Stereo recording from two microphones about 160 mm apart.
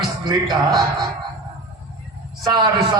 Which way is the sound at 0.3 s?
25° right (ahead or behind).